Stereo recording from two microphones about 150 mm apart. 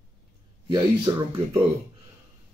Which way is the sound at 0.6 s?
35° right (ahead or behind).